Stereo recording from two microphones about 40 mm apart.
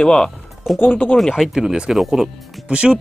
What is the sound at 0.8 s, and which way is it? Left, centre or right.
Speech, left.